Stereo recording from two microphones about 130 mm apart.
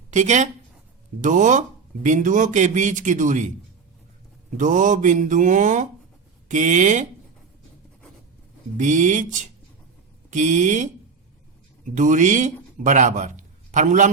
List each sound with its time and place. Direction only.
0.1 s speech: 65° right (ahead or behind)
4.5 s speech: 80° right
8.8 s speech: 75° right (ahead or behind)
10.2 s speech: 75° right (ahead or behind)
11.9 s a man's voice: 75° right (ahead or behind)